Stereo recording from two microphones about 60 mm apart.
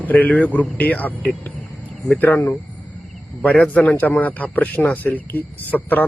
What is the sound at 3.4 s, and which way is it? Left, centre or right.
Speech, centre.